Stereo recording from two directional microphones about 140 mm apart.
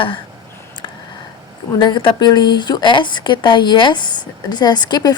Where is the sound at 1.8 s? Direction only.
35° left (ahead or behind).